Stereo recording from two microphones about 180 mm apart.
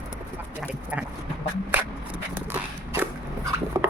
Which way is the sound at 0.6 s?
5° right (ahead or behind).